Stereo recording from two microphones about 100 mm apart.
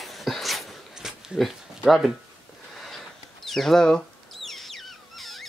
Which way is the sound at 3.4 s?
Centre (ahead or behind).